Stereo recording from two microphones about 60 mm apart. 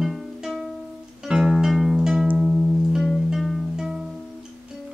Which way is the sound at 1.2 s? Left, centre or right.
Centre.